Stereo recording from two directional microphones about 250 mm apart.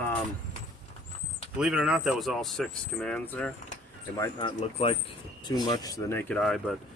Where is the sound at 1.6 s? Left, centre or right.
Centre.